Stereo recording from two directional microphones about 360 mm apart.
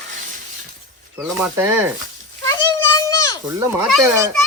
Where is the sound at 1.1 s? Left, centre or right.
Centre.